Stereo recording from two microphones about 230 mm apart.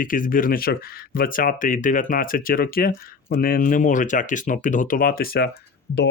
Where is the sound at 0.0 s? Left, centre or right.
Left.